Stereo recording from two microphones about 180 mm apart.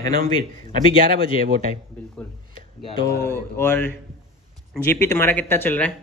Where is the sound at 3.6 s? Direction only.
10° left (ahead or behind).